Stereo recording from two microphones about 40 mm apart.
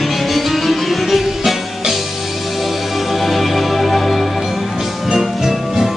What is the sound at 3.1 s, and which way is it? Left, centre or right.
Music, centre.